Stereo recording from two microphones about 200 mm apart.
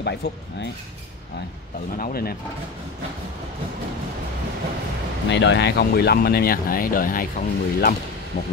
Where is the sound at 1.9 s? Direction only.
45° left (ahead or behind).